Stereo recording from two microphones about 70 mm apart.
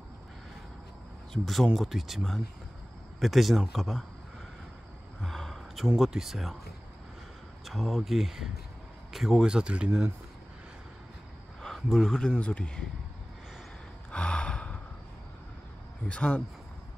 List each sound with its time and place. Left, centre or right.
1.3 s speech: centre
5.2 s gasp: centre
5.9 s speech: centre
7.6 s a man's voice: centre
11.6 s speech: centre
14.1 s gasp: centre
16.1 s speech: centre